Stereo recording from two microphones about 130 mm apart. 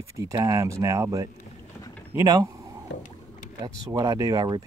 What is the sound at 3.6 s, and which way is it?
Speech, 30° right (ahead or behind).